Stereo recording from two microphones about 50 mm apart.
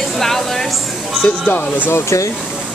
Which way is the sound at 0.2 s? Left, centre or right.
Centre.